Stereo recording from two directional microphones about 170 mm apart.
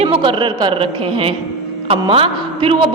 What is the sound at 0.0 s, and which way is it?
A woman's voice, 30° right (ahead or behind).